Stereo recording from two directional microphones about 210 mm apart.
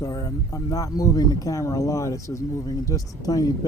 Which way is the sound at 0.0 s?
15° left (ahead or behind).